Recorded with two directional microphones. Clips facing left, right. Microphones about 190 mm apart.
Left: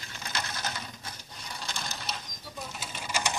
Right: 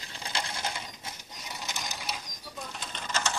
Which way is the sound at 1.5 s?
20° right (ahead or behind).